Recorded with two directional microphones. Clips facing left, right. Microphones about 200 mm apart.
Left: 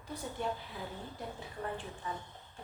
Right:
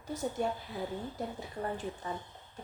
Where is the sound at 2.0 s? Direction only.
35° right (ahead or behind).